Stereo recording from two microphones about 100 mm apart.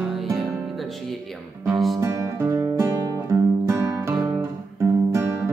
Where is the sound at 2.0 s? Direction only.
30° right (ahead or behind).